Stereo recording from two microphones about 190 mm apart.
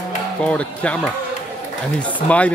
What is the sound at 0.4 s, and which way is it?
Speech, 5° left (ahead or behind).